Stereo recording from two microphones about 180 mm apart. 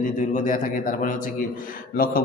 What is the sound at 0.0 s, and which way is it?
A man's voice, 45° left (ahead or behind).